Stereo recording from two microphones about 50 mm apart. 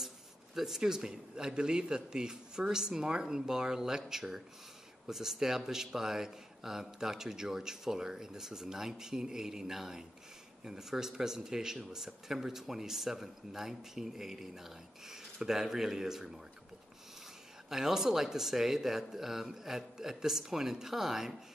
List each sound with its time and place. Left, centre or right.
0.6 s a man's voice: centre
17.6 s a man's voice: centre